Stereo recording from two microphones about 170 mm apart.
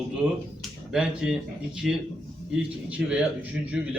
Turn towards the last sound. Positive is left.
turn(degrees=-5)  # may be behind; listen again after turning